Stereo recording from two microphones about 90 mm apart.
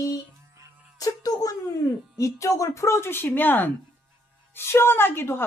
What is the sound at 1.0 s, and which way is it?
A child's voice, 45° left (ahead or behind).